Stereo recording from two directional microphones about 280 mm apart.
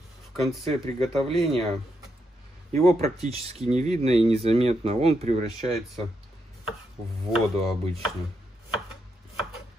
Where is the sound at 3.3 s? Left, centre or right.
Right.